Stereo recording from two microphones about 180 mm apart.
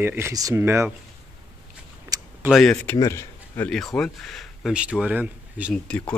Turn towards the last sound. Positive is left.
turn(degrees=5)  # may be behind; listen again after turning